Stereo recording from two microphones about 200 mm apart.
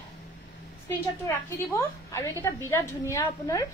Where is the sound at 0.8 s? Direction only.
10° left (ahead or behind).